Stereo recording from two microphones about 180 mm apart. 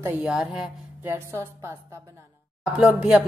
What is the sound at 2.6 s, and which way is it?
Speech, 5° right (ahead or behind).